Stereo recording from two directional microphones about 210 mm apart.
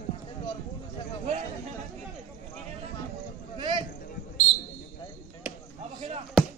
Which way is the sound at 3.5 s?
25° right (ahead or behind).